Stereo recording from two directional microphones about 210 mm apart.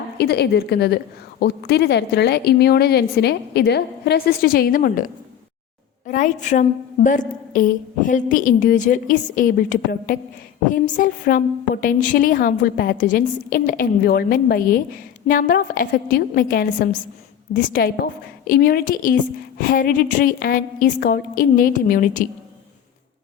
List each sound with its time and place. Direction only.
0.2 s a woman's voice: 50° left (ahead or behind)